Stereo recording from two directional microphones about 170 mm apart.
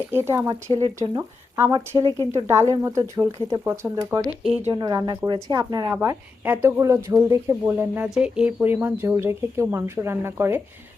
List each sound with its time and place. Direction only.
0.1 s speech: 15° right (ahead or behind)
0.8 s speech: 25° right (ahead or behind)
5.9 s speech: 15° right (ahead or behind)